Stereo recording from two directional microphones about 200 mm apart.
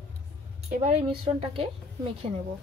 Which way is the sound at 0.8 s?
30° right (ahead or behind).